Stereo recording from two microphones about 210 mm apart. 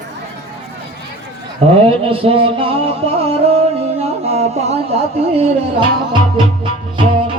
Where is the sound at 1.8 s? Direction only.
25° right (ahead or behind).